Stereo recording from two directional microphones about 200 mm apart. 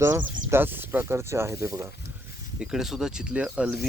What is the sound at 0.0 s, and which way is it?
Speech, 10° right (ahead or behind).